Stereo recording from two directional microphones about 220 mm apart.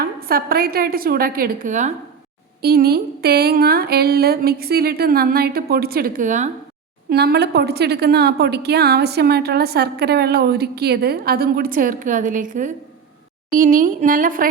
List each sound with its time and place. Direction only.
0.0 s a woman's voice: 40° right (ahead or behind)
7.1 s a woman's voice: 45° right (ahead or behind)